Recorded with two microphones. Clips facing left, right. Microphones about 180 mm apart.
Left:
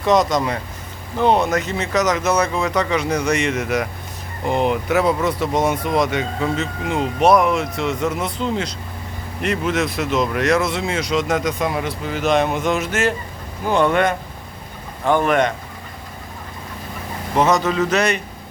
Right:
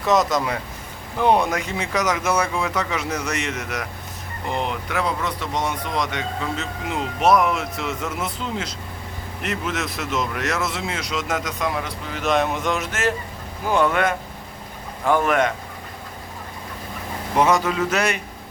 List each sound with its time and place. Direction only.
0.0 s speech: 5° right (ahead or behind)
17.3 s speech: 10° right (ahead or behind)